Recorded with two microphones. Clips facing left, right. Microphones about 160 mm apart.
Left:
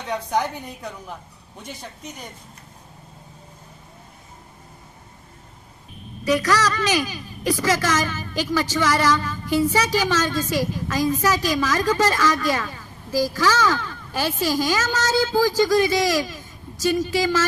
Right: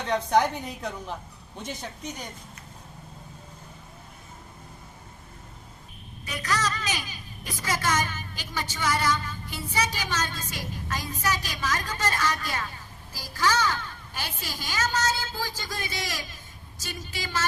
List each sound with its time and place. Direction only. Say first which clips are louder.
0.3 s a woman's voice: right 2 dB; 10° left (ahead or behind)
6.2 s a woman's voice: left 10 dB; 85° left